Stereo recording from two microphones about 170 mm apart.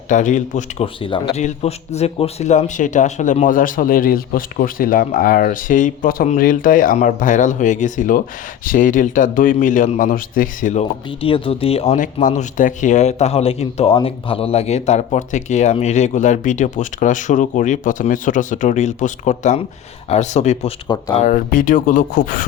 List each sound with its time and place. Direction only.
0.1 s speech: 45° left (ahead or behind)
1.0 s speech: 30° left (ahead or behind)
1.4 s speech: 40° left (ahead or behind)
11.2 s speech: 30° left (ahead or behind)
11.9 s speech: 50° left (ahead or behind)
20.8 s speech: 25° left (ahead or behind)
21.2 s speech: 50° left (ahead or behind)